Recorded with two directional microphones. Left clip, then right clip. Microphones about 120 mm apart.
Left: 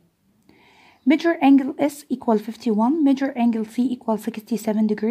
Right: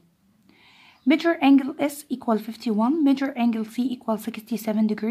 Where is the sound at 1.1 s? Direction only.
25° left (ahead or behind).